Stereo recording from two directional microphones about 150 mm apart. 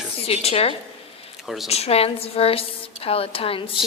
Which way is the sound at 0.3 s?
40° left (ahead or behind).